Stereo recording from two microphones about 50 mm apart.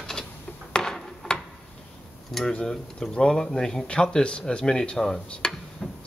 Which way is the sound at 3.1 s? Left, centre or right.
Centre.